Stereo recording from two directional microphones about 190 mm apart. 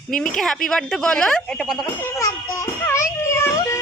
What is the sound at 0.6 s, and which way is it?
Speech, 5° left (ahead or behind).